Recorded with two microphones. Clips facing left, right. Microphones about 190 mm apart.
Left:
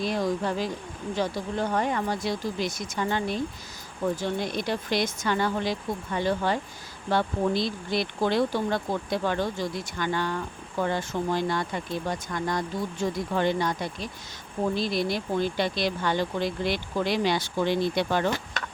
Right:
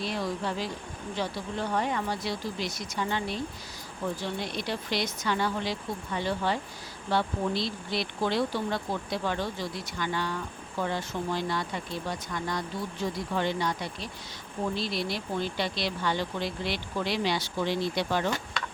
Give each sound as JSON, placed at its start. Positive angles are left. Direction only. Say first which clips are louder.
{"t": 0.0, "sound": "speech", "louder": "left 5 dB", "side_deg": 45}